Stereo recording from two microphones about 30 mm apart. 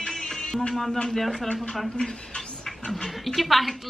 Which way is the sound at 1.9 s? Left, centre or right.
Left.